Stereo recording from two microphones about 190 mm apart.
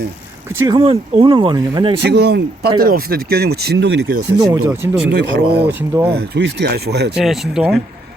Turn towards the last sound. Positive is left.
turn(degrees=0)  # may be behind; listen again after turning